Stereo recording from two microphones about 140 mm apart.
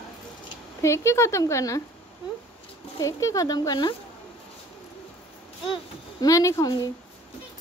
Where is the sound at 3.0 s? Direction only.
25° left (ahead or behind).